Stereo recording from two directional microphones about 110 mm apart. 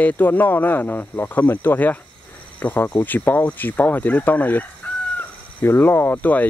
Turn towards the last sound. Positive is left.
turn(degrees=15)  # may be behind; listen again after turning